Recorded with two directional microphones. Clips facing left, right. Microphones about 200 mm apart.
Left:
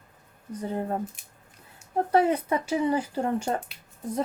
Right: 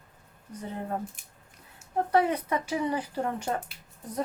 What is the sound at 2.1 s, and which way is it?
Speech, 30° left (ahead or behind).